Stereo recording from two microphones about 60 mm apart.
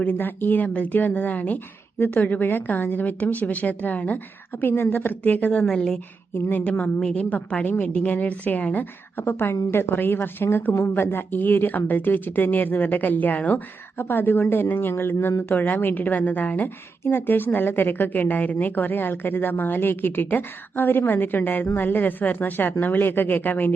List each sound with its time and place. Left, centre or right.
0.0 s a woman's voice: left
5.6 s a woman's voice: centre; by 23.7 s left